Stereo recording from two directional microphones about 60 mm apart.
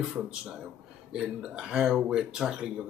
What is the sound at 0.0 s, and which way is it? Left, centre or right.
Speech, centre.